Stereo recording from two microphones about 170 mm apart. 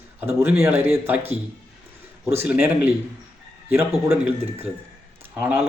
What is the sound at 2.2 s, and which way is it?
Speech, 15° right (ahead or behind).